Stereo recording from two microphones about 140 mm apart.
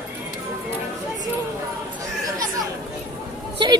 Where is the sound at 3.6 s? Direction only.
35° right (ahead or behind).